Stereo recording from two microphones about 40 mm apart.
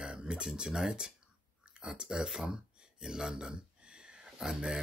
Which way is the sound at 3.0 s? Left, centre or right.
Centre.